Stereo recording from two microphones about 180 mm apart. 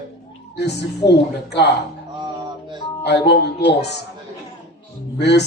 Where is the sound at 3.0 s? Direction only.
70° left (ahead or behind).